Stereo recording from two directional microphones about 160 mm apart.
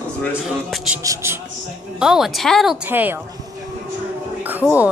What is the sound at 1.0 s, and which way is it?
Speech, 20° right (ahead or behind).